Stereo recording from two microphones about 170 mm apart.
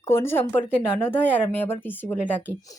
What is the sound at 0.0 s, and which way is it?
Speech, 15° left (ahead or behind).